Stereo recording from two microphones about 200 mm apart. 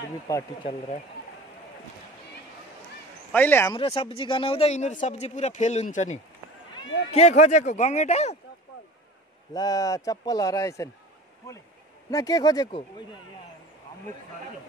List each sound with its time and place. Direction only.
0.3 s a man's voice: 15° left (ahead or behind)
3.3 s a man's voice: 10° left (ahead or behind)
3.7 s speech: 30° left (ahead or behind)
9.5 s a man's voice: 20° left (ahead or behind)
12.1 s speech: 15° left (ahead or behind)